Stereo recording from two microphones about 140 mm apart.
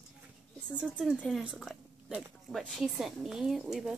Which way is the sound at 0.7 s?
5° right (ahead or behind).